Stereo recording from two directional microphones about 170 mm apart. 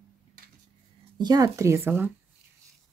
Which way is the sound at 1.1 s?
25° right (ahead or behind).